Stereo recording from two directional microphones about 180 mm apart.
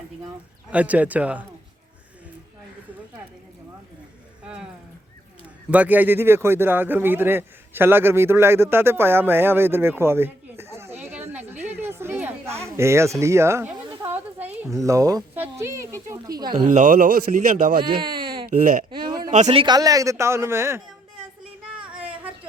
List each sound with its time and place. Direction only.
0.7 s speech: 10° right (ahead or behind)
4.4 s speech: 5° right (ahead or behind)
5.7 s speech: 10° right (ahead or behind)
11.3 s a sound: 10° right (ahead or behind)
14.8 s speech: 20° right (ahead or behind)
16.6 s speech: 50° right (ahead or behind)
17.8 s a sound: 25° right (ahead or behind)
18.4 s speech: 45° right (ahead or behind)
18.9 s a sound: 25° right (ahead or behind)
19.3 s a man's voice: 40° right (ahead or behind)
19.6 s speech: 20° right (ahead or behind)
21.8 s a sound: 5° right (ahead or behind)